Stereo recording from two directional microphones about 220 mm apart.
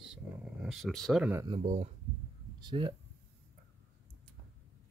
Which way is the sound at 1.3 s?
15° right (ahead or behind).